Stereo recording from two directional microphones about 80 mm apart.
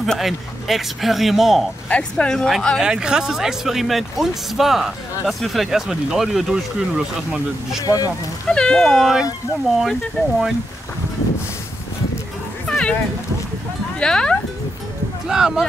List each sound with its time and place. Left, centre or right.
0.0 s speech: centre
1.9 s speech: centre
2.8 s speech: centre
7.8 s speech: left
8.5 s speech: centre
12.6 s music: centre
13.9 s speech: centre
15.2 s speech: centre